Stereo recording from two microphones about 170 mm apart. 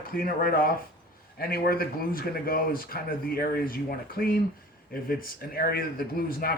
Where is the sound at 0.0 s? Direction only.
60° left (ahead or behind).